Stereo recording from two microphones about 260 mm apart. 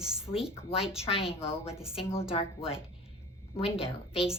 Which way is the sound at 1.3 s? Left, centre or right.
Left.